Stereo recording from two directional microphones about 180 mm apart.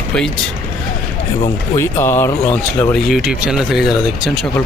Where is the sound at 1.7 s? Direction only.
15° left (ahead or behind).